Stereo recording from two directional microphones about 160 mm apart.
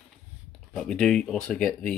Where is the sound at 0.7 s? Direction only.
5° left (ahead or behind).